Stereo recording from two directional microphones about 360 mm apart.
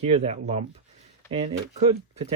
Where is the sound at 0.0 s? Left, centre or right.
Centre.